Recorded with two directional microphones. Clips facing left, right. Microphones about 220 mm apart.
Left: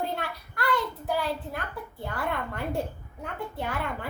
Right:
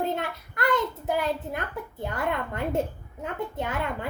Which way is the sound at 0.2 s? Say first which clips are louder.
Right 3 dB; 20° right (ahead or behind).